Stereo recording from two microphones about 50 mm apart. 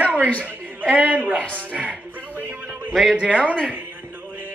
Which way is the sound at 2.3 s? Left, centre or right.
Right.